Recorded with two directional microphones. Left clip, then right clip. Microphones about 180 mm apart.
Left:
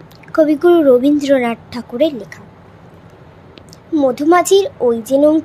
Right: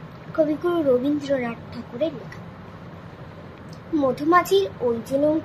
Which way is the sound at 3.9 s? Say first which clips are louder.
Left 7 dB; 55° left (ahead or behind).